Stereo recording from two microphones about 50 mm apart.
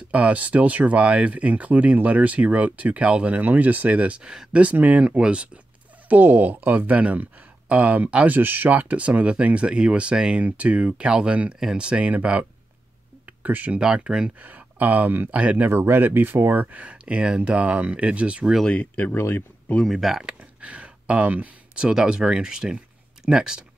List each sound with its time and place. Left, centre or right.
0.1 s speech: right
6.0 s speech: right
8.3 s speech: right
13.7 s speech: centre
14.4 s speech: right
15.7 s speech: right
16.5 s speech: right
18.7 s speech: left
19.1 s speech: left
19.9 s speech: centre
20.3 s a sound: right
21.8 s speech: centre